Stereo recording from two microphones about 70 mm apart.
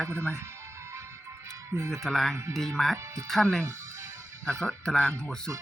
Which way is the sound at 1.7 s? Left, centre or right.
Right.